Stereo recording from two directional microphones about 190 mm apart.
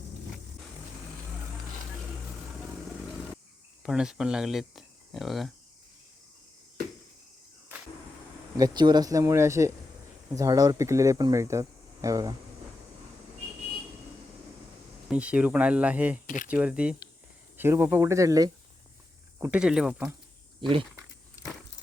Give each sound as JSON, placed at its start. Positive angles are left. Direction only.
{"t": 3.8, "sound": "speech", "side_deg": -5}
{"t": 8.5, "sound": "speech", "side_deg": -20}
{"t": 15.1, "sound": "speech", "side_deg": -5}
{"t": 16.2, "sound": "speech", "side_deg": 45}
{"t": 16.5, "sound": "speech", "side_deg": -5}
{"t": 19.4, "sound": "speech", "side_deg": -5}
{"t": 20.6, "sound": "speech", "side_deg": -25}